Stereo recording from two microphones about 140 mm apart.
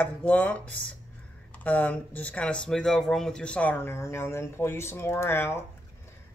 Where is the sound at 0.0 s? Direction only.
10° left (ahead or behind).